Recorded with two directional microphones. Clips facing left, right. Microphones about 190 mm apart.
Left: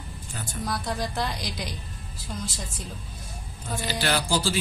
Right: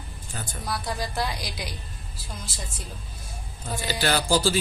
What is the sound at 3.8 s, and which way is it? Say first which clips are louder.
Speech: right 2 dB; 40° right (ahead or behind).